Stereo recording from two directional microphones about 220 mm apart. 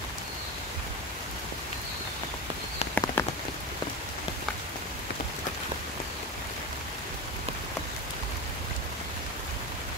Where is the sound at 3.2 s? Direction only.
10° left (ahead or behind).